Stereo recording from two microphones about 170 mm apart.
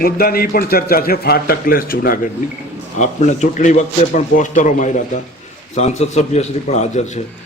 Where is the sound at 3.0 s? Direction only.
45° left (ahead or behind).